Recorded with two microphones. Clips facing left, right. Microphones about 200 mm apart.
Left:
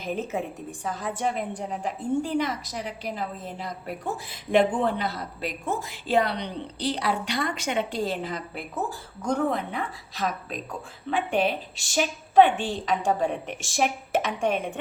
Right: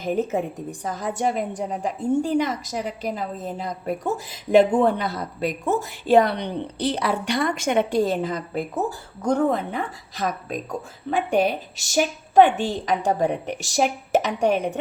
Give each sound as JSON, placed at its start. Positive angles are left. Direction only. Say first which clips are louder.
{"t": 0.0, "sound": "a woman's voice", "louder": "right 6 dB", "side_deg": -40}